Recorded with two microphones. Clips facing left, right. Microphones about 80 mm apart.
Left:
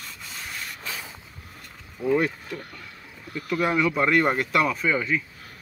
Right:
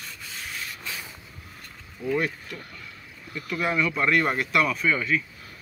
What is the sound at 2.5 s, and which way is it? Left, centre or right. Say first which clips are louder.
Speech: left 3 dB; left.